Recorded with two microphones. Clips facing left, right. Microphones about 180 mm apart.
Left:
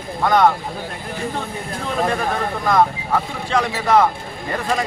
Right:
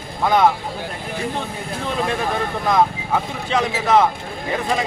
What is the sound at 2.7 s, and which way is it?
Speech, centre (ahead or behind).